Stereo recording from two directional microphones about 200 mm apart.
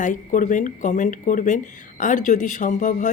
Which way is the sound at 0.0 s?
40° left (ahead or behind).